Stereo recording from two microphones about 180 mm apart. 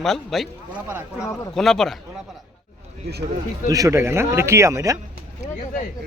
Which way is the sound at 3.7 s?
20° right (ahead or behind).